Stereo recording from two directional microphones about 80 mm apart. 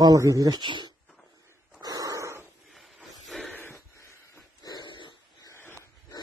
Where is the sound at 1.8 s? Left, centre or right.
Right.